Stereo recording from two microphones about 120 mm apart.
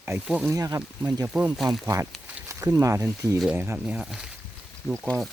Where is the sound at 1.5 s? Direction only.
Centre (ahead or behind).